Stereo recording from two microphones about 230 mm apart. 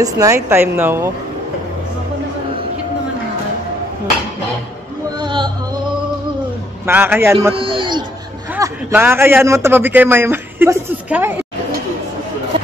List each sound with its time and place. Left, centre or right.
0.0 s a man's voice: centre
5.2 s music: centre
6.9 s a man's voice: centre
7.5 s a sound: right
8.5 s a man's voice: centre